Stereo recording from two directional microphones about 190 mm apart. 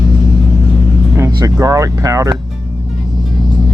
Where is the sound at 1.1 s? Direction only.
15° right (ahead or behind).